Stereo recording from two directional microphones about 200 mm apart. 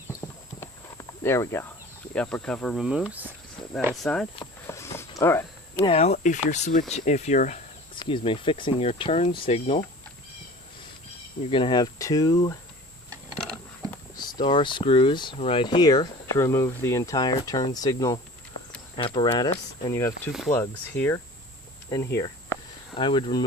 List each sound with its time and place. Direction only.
0.2 s horse: 10° left (ahead or behind)
2.1 s speech: 5° left (ahead or behind)
4.0 s speech: 5° left (ahead or behind)
4.6 s a sound: 15° left (ahead or behind)
5.7 s speech: 30° left (ahead or behind)
7.9 s speech: 25° left (ahead or behind)
11.5 s speech: 25° left (ahead or behind)
14.2 s speech: 20° left (ahead or behind)